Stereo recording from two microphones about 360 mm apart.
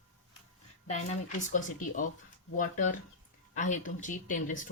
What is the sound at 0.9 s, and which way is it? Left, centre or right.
Speech, centre.